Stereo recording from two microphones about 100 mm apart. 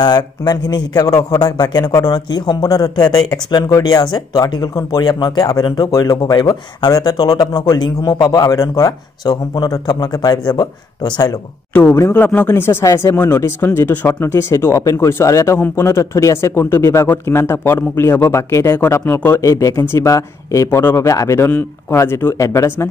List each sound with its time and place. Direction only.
0.0 s a man's voice: 45° left (ahead or behind)
12.1 s speech: 15° left (ahead or behind)
19.4 s a man's voice: 35° left (ahead or behind)